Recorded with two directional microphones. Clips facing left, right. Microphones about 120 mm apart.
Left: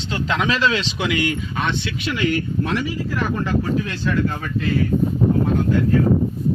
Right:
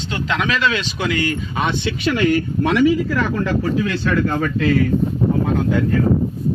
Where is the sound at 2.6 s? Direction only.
90° right.